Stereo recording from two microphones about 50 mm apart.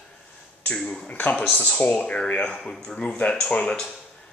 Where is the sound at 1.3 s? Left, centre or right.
Centre.